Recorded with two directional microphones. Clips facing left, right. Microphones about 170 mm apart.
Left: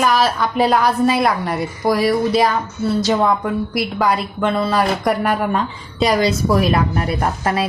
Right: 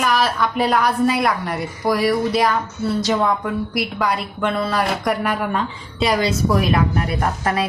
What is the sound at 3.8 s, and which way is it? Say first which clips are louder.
A woman's voice: left 4 dB; 30° left (ahead or behind).